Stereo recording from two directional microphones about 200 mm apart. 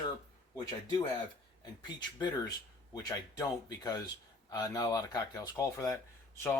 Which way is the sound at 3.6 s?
20° left (ahead or behind).